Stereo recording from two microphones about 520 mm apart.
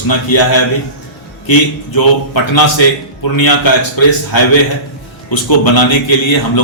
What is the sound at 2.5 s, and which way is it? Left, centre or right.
A man's voice, left.